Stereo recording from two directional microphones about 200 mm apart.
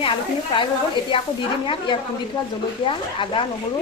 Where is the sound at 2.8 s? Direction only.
25° left (ahead or behind).